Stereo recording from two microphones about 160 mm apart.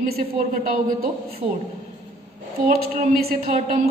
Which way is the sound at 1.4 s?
35° right (ahead or behind).